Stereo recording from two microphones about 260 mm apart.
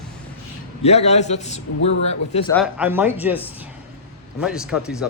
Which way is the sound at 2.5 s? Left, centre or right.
Centre.